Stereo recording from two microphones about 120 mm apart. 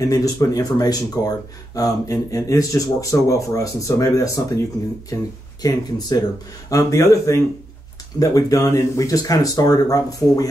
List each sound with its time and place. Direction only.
0.1 s speech: 30° left (ahead or behind)
5.6 s speech: 35° left (ahead or behind)